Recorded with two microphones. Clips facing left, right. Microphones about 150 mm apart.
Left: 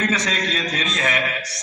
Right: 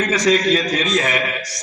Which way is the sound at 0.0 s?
10° right (ahead or behind).